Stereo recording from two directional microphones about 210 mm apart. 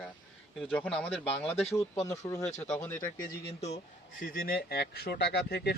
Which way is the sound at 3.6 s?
35° left (ahead or behind).